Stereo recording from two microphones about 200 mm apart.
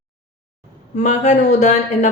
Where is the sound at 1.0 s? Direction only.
35° left (ahead or behind).